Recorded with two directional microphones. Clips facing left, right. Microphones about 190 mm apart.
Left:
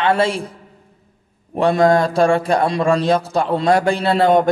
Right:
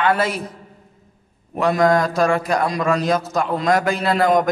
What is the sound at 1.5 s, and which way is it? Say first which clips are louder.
A man's voice: left 3 dB; 30° left (ahead or behind).